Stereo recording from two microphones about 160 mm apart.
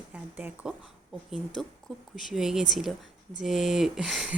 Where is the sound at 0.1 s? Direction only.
10° right (ahead or behind).